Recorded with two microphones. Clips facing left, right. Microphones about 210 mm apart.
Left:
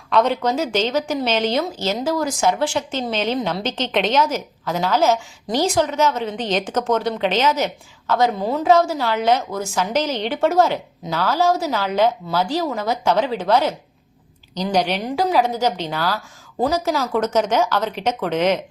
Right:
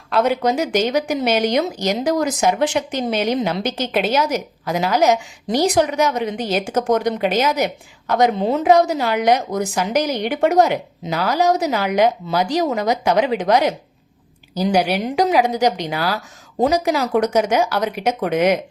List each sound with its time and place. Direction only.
0.1 s speech: 10° right (ahead or behind)